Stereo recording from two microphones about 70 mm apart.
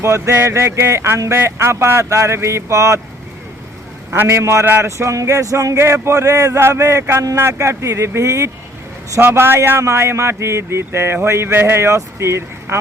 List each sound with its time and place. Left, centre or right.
0.0 s speech: right
4.1 s speech: right
6.6 s speech: right